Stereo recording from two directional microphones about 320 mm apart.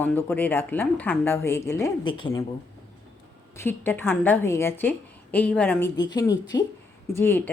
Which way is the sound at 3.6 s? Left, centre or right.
Centre.